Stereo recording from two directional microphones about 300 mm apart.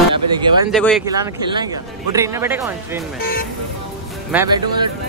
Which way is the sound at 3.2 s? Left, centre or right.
Left.